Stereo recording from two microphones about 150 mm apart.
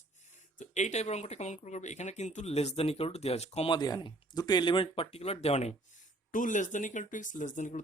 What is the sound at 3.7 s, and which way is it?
Speech, 30° left (ahead or behind).